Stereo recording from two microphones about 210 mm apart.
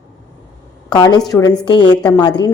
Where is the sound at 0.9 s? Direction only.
20° left (ahead or behind).